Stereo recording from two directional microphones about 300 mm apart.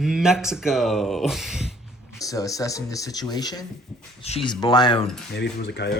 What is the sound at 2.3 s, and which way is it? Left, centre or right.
Speech, centre.